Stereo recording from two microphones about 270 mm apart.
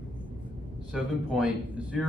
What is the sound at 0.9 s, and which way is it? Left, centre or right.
Speech, centre.